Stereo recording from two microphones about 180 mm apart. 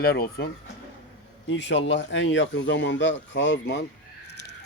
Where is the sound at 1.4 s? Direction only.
85° left.